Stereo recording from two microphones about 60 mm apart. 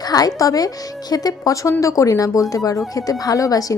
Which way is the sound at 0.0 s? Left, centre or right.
Left.